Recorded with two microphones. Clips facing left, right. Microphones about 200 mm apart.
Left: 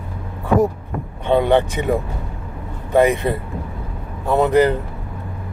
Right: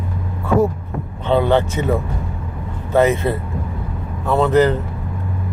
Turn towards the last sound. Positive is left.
turn(degrees=10)  # may be behind; listen again after turning